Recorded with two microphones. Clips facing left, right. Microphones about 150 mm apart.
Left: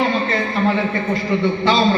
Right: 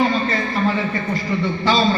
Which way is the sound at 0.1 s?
20° left (ahead or behind).